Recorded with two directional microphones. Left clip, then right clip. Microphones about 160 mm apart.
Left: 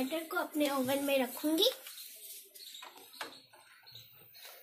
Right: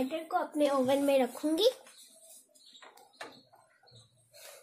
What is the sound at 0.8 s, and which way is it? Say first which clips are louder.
Speech: right 5 dB; 70° right (ahead or behind).